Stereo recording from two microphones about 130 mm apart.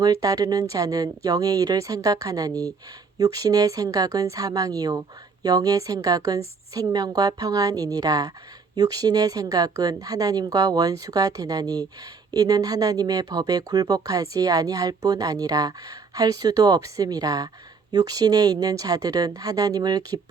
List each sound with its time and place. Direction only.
0.0 s speech: 30° right (ahead or behind)